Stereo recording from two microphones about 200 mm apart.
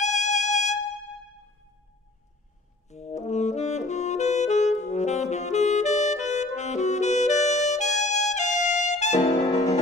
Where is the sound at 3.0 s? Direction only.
35° left (ahead or behind).